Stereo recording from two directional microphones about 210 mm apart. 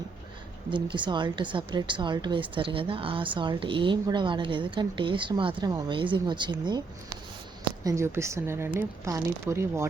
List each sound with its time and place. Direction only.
0.7 s speech: 25° right (ahead or behind)
7.9 s speech: 15° right (ahead or behind)